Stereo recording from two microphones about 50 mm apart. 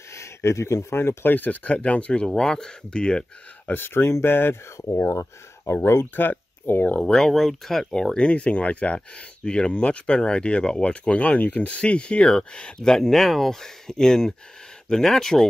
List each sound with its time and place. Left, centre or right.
0.1 s speech: left
1.3 s speech: left; by 3.3 s centre
3.6 s speech: left
5.1 s speech: left
6.1 s speech: left
7.0 s speech: centre
8.2 s speech: left